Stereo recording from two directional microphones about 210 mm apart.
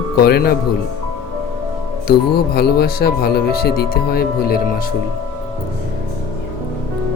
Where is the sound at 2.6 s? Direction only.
50° left (ahead or behind).